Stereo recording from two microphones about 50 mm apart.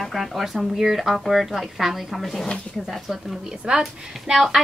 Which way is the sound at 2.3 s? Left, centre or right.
Centre.